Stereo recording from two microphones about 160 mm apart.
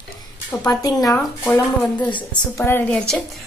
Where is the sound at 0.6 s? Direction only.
25° left (ahead or behind).